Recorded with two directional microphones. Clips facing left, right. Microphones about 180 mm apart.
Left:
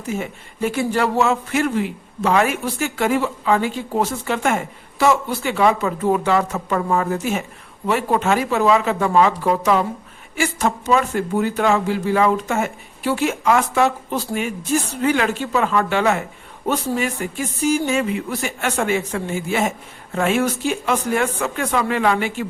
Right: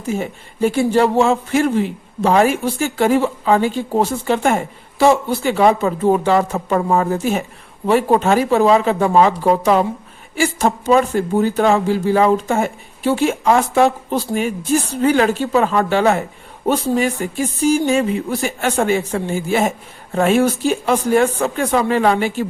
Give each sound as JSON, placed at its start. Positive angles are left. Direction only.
{"t": 0.1, "sound": "speech", "side_deg": -30}